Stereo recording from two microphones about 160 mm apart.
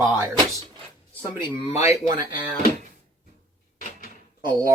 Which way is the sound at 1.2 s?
30° left (ahead or behind).